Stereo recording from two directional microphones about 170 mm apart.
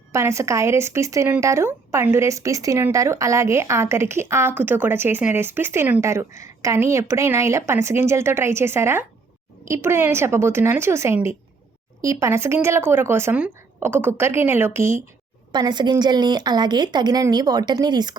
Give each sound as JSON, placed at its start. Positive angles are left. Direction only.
{"t": 0.1, "sound": "speech", "side_deg": -15}